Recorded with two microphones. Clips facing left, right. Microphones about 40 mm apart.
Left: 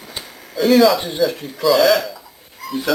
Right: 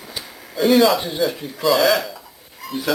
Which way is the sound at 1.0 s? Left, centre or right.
Centre.